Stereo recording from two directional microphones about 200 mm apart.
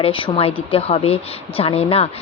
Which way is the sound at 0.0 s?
25° left (ahead or behind).